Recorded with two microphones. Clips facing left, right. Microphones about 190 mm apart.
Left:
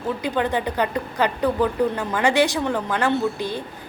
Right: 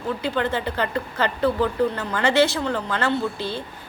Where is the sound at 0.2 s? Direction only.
15° left (ahead or behind).